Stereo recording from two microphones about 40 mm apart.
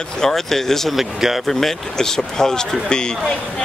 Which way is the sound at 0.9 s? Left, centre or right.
Centre.